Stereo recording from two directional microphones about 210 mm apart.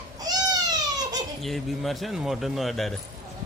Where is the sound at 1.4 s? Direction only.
Centre (ahead or behind).